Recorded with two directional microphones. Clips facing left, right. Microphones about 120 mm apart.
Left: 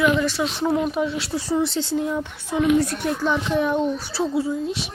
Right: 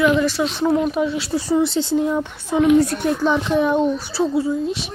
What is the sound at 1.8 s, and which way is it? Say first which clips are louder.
A woman's voice: right 4 dB; 25° right (ahead or behind).